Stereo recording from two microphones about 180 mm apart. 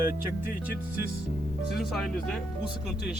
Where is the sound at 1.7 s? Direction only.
Centre (ahead or behind).